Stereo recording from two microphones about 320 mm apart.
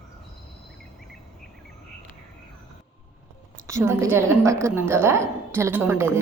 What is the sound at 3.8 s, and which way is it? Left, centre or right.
A woman's voice, centre.